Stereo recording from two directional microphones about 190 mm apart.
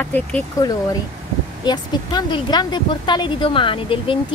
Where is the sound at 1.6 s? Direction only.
20° left (ahead or behind).